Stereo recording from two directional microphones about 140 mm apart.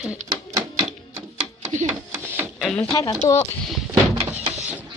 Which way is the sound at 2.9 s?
25° left (ahead or behind).